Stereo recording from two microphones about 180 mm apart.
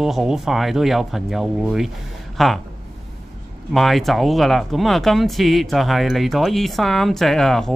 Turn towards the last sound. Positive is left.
turn(degrees=0)  # may be behind; listen again after turning